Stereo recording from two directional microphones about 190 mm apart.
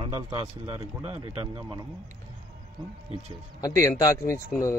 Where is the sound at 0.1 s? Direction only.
15° right (ahead or behind).